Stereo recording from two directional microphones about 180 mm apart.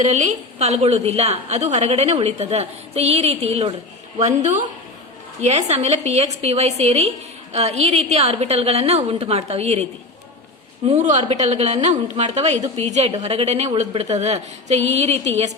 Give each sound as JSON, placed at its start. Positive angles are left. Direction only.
{"t": 0.0, "sound": "a woman's voice", "side_deg": -40}
{"t": 10.8, "sound": "a woman's voice", "side_deg": -40}